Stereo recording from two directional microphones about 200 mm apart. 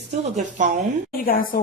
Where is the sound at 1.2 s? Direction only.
45° left (ahead or behind).